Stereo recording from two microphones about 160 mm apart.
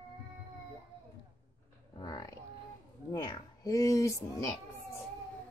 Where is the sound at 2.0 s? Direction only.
25° left (ahead or behind).